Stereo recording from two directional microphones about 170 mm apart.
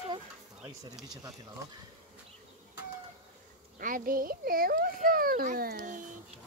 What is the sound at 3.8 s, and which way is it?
A child's voice, 55° right (ahead or behind).